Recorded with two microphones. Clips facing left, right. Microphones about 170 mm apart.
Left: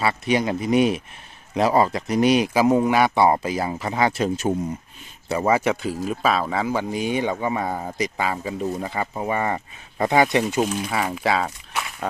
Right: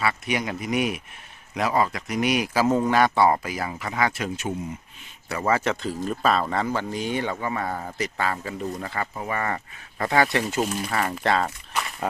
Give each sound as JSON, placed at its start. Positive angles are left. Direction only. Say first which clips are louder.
{"t": 0.0, "sound": "speech", "louder": "left 5 dB", "side_deg": 30}
{"t": 5.5, "sound": "speech", "louder": "left 2 dB", "side_deg": 15}
{"t": 10.6, "sound": "speech", "louder": "left 2 dB", "side_deg": 0}